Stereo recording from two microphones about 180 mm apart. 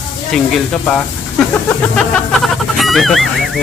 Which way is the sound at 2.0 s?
Centre (ahead or behind).